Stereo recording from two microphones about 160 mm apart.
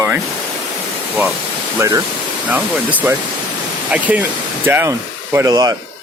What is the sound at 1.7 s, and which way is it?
Speech, 20° right (ahead or behind).